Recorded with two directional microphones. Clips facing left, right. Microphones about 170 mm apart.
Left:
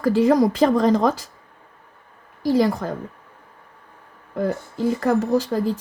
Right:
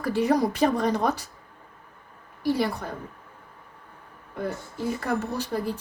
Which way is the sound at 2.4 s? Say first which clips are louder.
Left 6 dB; 90° left.